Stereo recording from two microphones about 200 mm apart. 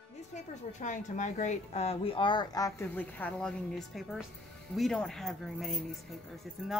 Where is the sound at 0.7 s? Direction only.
40° left (ahead or behind).